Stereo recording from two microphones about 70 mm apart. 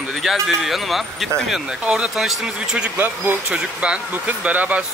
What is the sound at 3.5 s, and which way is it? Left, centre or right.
A man's voice, centre.